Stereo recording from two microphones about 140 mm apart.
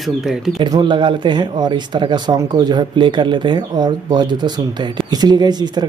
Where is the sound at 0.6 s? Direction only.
30° right (ahead or behind).